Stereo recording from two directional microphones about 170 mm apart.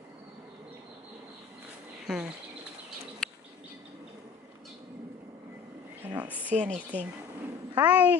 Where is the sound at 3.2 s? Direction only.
5° left (ahead or behind).